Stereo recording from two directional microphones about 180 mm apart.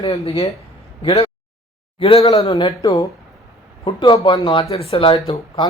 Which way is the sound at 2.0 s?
30° left (ahead or behind).